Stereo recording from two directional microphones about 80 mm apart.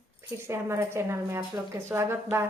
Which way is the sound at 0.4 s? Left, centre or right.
Right.